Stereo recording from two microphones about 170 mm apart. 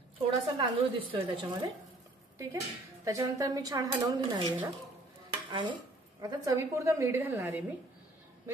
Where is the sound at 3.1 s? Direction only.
20° right (ahead or behind).